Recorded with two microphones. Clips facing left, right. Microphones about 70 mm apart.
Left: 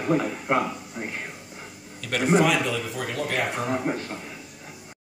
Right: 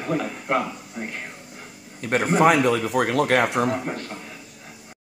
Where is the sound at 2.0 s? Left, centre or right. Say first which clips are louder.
Right 4 dB; right.